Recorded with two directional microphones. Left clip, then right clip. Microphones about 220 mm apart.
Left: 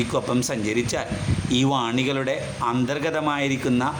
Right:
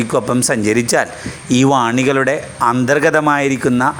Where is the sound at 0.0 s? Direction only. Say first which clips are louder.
Right 8 dB; 30° right (ahead or behind).